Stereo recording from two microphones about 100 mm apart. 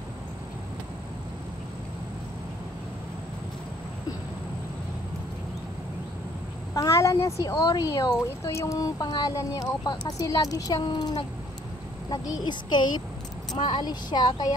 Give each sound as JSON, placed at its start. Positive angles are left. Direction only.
{"t": 6.7, "sound": "a woman's voice", "side_deg": 30}